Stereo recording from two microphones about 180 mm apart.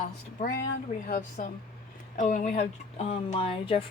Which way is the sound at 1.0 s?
50° left (ahead or behind).